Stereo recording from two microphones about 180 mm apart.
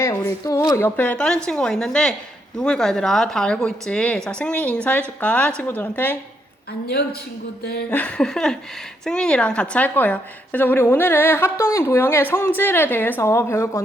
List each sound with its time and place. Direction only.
0.0 s a woman's voice: 15° left (ahead or behind)
6.8 s speech: 60° left (ahead or behind)
7.9 s a woman's voice: 10° left (ahead or behind)